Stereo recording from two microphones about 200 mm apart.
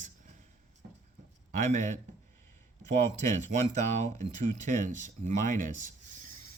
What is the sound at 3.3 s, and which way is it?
Speech, 35° right (ahead or behind).